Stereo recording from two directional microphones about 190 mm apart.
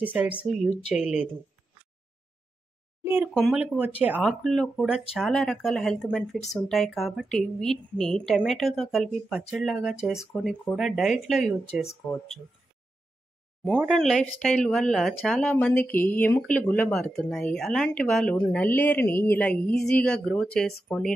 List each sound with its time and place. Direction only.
0.0 s speech: 10° right (ahead or behind)
3.0 s a sound: 10° right (ahead or behind)
3.3 s speech: centre (ahead or behind)
11.6 s speech: 35° left (ahead or behind)
13.7 s speech: 5° right (ahead or behind)